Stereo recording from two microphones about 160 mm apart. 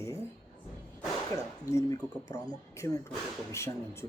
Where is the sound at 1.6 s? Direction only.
20° left (ahead or behind).